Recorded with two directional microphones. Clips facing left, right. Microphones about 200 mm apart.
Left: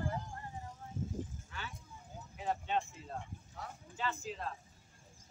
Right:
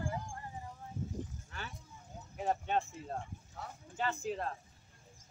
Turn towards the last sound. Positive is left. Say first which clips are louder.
# right 4 dB
turn(degrees=-50)  # may be behind; listen again after turning